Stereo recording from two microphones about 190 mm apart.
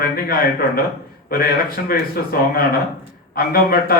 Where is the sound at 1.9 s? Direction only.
50° left (ahead or behind).